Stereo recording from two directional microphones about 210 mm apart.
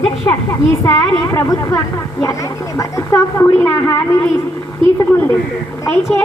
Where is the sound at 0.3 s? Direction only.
15° left (ahead or behind).